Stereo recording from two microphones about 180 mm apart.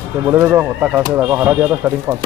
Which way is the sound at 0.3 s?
10° right (ahead or behind).